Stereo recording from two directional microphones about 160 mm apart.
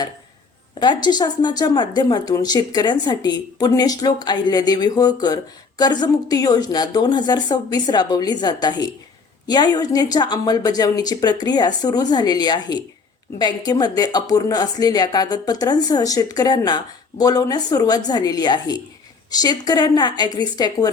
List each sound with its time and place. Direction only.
0.8 s speech: 25° left (ahead or behind)